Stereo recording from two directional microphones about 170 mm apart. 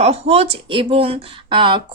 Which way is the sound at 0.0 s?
35° right (ahead or behind).